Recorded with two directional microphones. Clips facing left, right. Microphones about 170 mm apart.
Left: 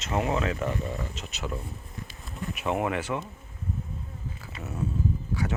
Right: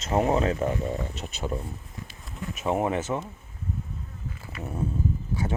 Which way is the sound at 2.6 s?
30° right (ahead or behind).